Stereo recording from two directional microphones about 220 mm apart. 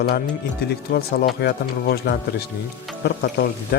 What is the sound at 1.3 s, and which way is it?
Speech, 50° left (ahead or behind).